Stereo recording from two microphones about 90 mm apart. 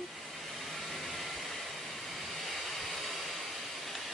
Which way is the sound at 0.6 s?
Centre (ahead or behind).